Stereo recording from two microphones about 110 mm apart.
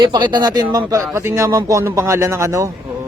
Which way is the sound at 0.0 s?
45° right (ahead or behind).